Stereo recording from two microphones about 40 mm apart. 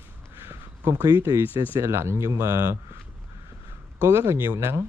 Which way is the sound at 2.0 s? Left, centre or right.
Right.